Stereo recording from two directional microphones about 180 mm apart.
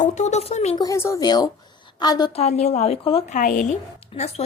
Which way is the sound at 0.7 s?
20° left (ahead or behind).